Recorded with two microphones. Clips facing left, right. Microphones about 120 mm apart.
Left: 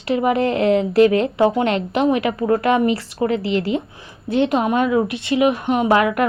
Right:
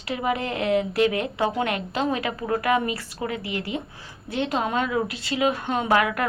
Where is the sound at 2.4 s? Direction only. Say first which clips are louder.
Left 8 dB; 35° left (ahead or behind).